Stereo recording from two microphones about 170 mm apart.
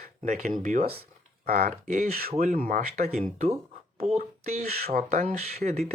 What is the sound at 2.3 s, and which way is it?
Speech, 45° right (ahead or behind).